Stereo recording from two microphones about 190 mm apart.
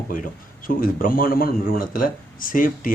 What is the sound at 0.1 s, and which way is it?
Speech, 45° left (ahead or behind).